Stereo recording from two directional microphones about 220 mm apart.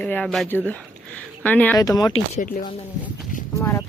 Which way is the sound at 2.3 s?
40° left (ahead or behind).